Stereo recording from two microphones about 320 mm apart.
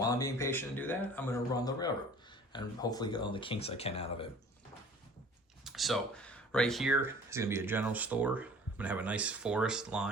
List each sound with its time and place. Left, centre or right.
0.0 s a man's voice: centre
5.6 s speech: centre